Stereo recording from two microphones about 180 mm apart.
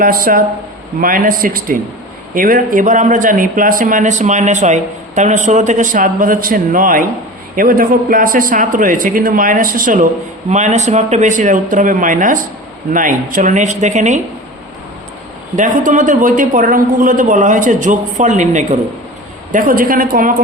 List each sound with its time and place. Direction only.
0.0 s a man's voice: 50° right (ahead or behind)
15.5 s a man's voice: 45° right (ahead or behind)